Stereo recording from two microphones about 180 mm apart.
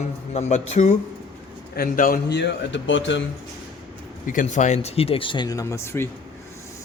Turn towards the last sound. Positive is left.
turn(degrees=15)  # may be behind; listen again after turning